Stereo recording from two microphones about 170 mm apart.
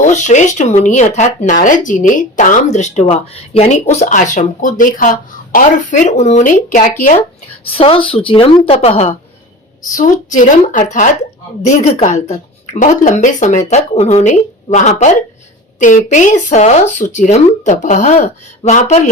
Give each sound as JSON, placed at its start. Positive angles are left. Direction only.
{"t": 0.1, "sound": "speech", "side_deg": 45}
{"t": 7.6, "sound": "speech", "side_deg": 35}
{"t": 9.9, "sound": "speech", "side_deg": 50}